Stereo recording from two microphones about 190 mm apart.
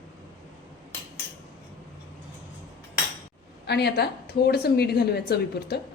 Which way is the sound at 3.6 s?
60° left (ahead or behind).